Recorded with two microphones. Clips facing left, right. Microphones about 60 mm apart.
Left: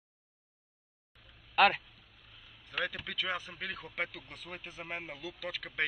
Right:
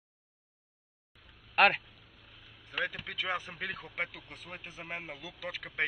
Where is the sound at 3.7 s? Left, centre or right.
Centre.